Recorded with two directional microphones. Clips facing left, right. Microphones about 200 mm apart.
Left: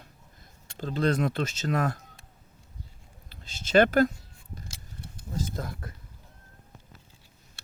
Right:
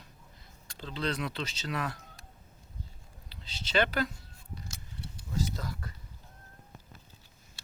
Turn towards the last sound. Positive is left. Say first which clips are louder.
# left 2 dB
turn(degrees=50)  # may be behind; listen again after turning